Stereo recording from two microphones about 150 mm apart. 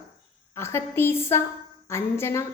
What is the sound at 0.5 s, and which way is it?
A woman's voice, 15° left (ahead or behind).